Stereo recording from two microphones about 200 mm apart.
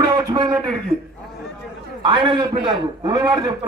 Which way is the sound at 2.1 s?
25° right (ahead or behind).